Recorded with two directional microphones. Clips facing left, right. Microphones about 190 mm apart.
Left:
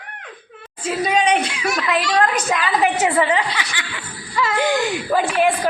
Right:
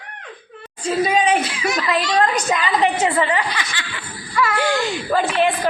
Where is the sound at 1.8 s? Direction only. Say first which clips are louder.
Even; centre (ahead or behind).